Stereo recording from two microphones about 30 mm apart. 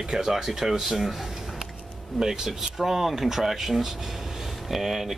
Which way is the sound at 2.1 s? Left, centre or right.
Centre.